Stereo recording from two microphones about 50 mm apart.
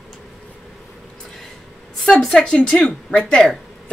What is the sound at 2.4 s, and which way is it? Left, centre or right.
Speech, centre.